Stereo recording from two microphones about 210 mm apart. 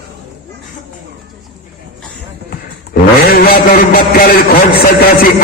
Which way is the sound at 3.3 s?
45° left (ahead or behind).